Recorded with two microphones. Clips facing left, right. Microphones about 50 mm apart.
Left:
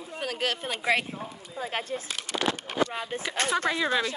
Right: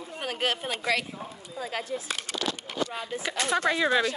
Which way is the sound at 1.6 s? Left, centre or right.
Left.